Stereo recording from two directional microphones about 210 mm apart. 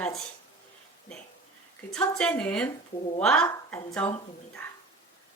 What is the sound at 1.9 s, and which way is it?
Speech, 5° left (ahead or behind).